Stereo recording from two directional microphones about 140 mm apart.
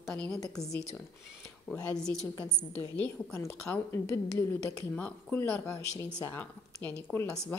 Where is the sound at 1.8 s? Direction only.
5° left (ahead or behind).